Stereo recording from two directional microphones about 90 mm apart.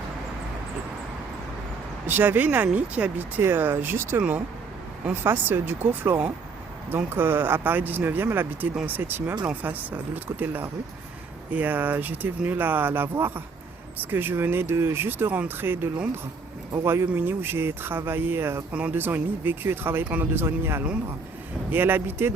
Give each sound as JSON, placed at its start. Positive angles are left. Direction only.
{"t": 2.0, "sound": "speech", "side_deg": -20}